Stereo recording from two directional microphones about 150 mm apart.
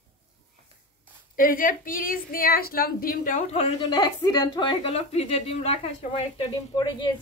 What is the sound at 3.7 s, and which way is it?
A woman's voice, 30° left (ahead or behind).